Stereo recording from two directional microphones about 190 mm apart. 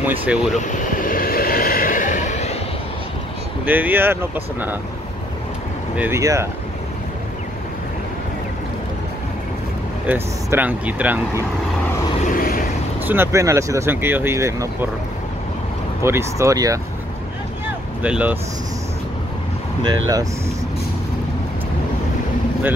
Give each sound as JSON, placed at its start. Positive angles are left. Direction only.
{"t": 0.0, "sound": "speech", "side_deg": -10}
{"t": 0.6, "sound": "vehicle", "side_deg": 45}
{"t": 3.6, "sound": "speech", "side_deg": -10}
{"t": 5.9, "sound": "speech", "side_deg": -15}
{"t": 10.0, "sound": "speech", "side_deg": -10}
{"t": 12.3, "sound": "vehicle", "side_deg": 45}
{"t": 13.0, "sound": "speech", "side_deg": -10}
{"t": 16.0, "sound": "speech", "side_deg": -15}
{"t": 18.0, "sound": "speech", "side_deg": -5}
{"t": 19.8, "sound": "speech", "side_deg": -20}